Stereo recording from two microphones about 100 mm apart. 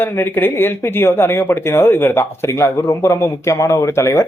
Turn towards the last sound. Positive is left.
turn(degrees=25)  # may be behind; listen again after turning